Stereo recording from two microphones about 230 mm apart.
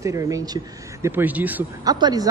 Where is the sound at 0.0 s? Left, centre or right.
Centre.